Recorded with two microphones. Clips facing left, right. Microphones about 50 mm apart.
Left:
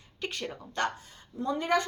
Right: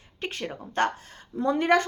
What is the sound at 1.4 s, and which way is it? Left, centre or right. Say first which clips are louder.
Speech: right 6 dB; right.